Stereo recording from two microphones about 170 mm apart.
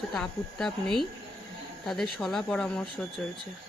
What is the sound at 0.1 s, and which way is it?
A woman's voice, centre (ahead or behind).